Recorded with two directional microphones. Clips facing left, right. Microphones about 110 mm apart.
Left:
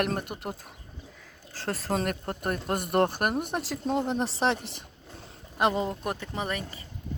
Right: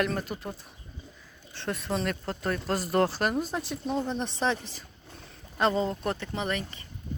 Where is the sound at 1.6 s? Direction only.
40° left (ahead or behind).